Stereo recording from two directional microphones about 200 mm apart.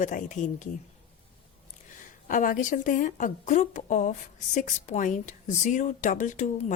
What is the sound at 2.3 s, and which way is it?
Speech, 40° left (ahead or behind).